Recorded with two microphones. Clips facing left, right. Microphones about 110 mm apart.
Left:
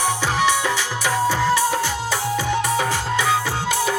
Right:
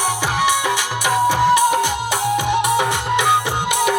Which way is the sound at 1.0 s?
15° right (ahead or behind).